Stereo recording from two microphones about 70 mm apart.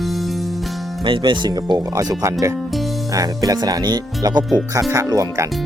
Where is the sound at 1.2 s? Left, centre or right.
Right.